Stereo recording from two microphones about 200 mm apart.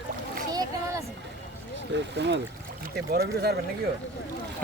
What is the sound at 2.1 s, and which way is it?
Speech, 60° right (ahead or behind).